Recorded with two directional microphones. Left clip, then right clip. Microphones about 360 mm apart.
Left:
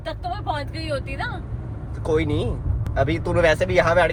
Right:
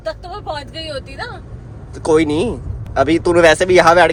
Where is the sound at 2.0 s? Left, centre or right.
Right.